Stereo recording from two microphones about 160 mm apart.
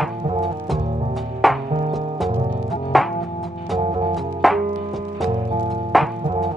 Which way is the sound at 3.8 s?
35° right (ahead or behind).